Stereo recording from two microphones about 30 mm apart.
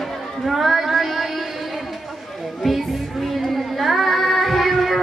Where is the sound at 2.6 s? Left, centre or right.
Centre.